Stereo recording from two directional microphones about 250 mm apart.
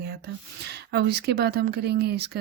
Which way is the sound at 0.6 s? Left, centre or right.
Right.